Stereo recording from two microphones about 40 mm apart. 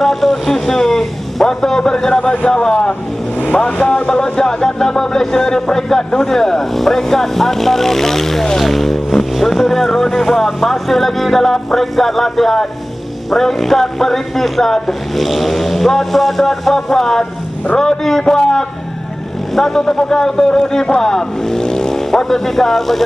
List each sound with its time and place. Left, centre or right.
0.0 s a man's voice: centre
3.3 s vehicle: left
4.1 s music: centre
9.4 s speech: centre
17.7 s music: centre
19.5 s speech: centre
19.8 s speech: centre